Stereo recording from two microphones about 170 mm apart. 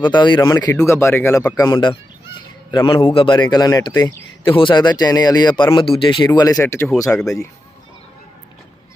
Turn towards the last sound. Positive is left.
turn(degrees=5)  # may be behind; listen again after turning